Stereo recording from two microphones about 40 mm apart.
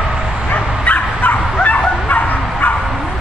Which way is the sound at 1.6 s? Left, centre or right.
Left.